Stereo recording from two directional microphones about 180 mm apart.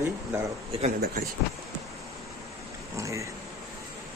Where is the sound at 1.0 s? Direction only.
60° right (ahead or behind).